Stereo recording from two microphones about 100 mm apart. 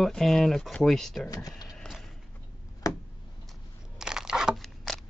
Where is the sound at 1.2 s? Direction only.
35° left (ahead or behind).